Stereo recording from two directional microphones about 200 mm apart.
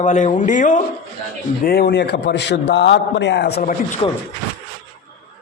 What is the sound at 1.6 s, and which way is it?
A man's voice, 50° left (ahead or behind).